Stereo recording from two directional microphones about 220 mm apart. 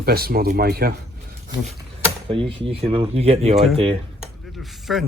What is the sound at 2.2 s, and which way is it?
Speech, 25° right (ahead or behind).